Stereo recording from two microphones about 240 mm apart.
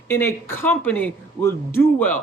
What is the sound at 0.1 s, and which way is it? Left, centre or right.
Speech, centre.